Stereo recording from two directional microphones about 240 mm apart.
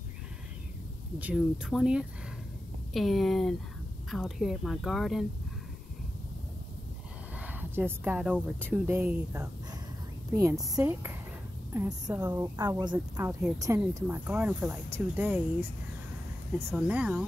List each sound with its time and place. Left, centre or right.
1.2 s speech: centre
7.3 s speech: centre
10.5 s speech: centre
16.5 s speech: centre